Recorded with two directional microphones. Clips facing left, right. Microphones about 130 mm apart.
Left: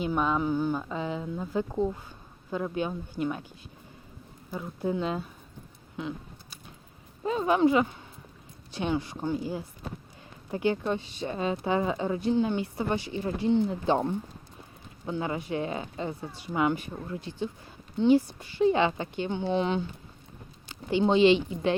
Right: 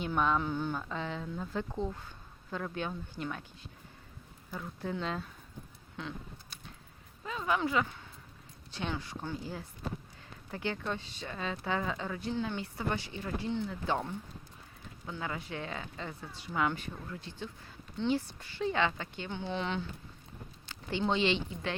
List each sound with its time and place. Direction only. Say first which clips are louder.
0.0 s speech: left 4 dB; 5° left (ahead or behind)
4.5 s speech: left 7 dB; 15° left (ahead or behind)
6.0 s a sound: left 6 dB; 5° left (ahead or behind)
7.2 s speech: left 9 dB; 30° left (ahead or behind)
15.0 s speech: left 8 dB; 20° left (ahead or behind)
16.9 s speech: left 7 dB; 25° left (ahead or behind)
17.2 s speech: left 9 dB; 15° left (ahead or behind)